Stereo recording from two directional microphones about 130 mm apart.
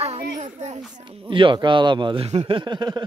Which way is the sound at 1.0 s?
40° right (ahead or behind).